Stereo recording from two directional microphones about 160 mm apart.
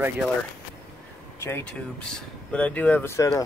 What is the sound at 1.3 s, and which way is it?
Speech, 15° left (ahead or behind).